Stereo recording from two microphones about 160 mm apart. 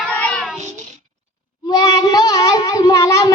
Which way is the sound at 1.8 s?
25° left (ahead or behind).